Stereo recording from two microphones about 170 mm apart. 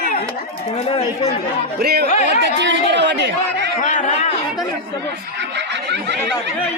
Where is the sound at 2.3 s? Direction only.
90° right.